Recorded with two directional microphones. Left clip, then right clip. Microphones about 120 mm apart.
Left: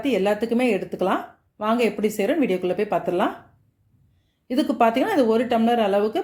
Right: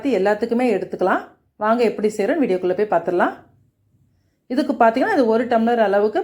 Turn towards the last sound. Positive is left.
turn(degrees=15)  # may be behind; listen again after turning